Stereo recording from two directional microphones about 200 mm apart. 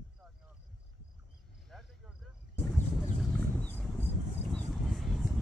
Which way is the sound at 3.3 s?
10° left (ahead or behind).